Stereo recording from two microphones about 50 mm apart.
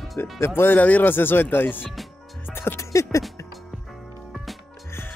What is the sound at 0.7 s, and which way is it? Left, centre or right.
Speech, left.